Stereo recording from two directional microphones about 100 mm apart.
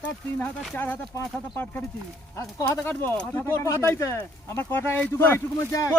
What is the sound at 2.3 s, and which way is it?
Speech, 30° left (ahead or behind).